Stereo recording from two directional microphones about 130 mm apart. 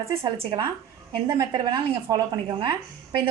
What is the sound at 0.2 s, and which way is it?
A woman's voice, 40° right (ahead or behind).